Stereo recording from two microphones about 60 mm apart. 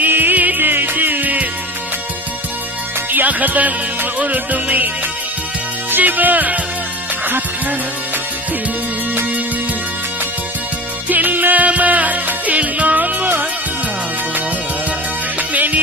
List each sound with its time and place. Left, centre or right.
0.0 s music: right
3.1 s music: right
5.9 s music: right
11.1 s music: right
15.4 s music: right